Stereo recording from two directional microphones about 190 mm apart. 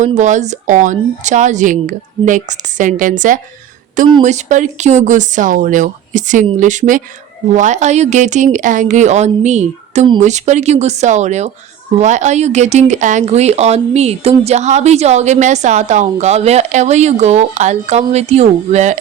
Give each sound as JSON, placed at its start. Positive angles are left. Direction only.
{"t": 0.0, "sound": "speech", "side_deg": -40}